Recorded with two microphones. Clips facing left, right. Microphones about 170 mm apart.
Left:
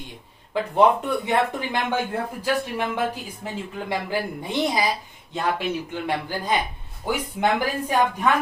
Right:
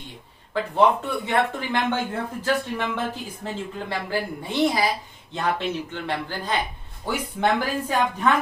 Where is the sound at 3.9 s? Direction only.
15° left (ahead or behind).